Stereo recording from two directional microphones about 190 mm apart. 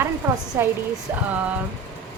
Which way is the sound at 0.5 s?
10° right (ahead or behind).